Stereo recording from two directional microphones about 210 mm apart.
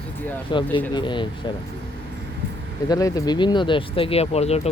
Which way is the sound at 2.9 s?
15° left (ahead or behind).